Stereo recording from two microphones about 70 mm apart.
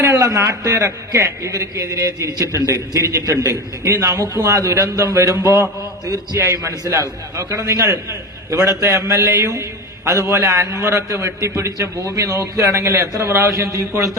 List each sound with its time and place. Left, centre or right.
0.2 s a man's voice: right
7.3 s a man's voice: right
10.1 s a man's voice: right